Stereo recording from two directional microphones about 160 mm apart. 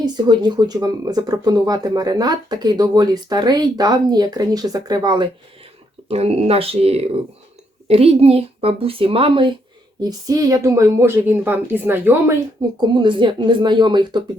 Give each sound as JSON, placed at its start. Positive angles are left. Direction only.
{"t": 0.0, "sound": "speech", "side_deg": -25}
{"t": 6.1, "sound": "a woman's voice", "side_deg": -40}
{"t": 12.9, "sound": "speech", "side_deg": -30}